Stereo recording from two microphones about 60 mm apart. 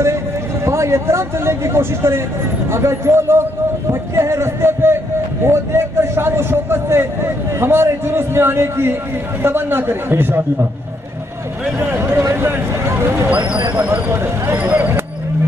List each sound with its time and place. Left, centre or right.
0.7 s a man's voice: right
3.9 s music: right
5.4 s a man's voice: right
11.8 s a sound: right
12.4 s vehicle: right
14.1 s a sound: right
14.5 s speech: right